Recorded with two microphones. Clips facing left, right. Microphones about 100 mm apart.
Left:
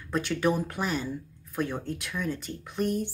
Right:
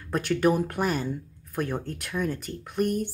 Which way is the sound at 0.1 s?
50° right (ahead or behind).